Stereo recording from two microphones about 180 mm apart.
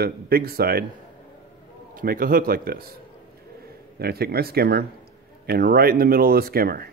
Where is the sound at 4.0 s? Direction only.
60° right (ahead or behind).